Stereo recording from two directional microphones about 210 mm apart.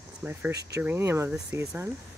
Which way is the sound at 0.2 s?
10° right (ahead or behind).